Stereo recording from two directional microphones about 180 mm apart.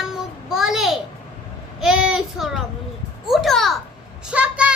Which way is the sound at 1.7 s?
5° right (ahead or behind).